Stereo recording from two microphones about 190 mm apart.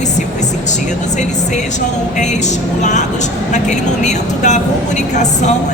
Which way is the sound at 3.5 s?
40° left (ahead or behind).